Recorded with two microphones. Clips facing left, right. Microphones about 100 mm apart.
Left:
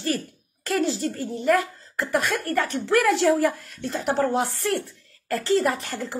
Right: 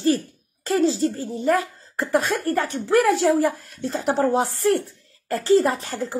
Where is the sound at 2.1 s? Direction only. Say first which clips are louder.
Right 3 dB; 30° right (ahead or behind).